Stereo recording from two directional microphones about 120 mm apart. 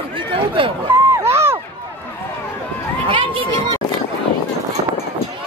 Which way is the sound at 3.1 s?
45° right (ahead or behind).